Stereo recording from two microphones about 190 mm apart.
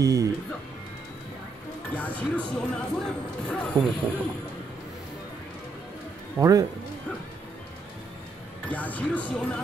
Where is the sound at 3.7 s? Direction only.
25° right (ahead or behind).